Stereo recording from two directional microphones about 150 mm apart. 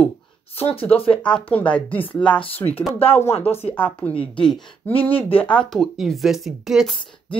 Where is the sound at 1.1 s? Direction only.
5° left (ahead or behind).